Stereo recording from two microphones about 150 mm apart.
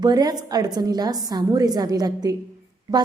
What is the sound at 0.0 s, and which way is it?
A woman's voice, 25° right (ahead or behind).